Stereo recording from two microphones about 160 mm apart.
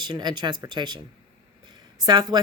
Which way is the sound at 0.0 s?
25° right (ahead or behind).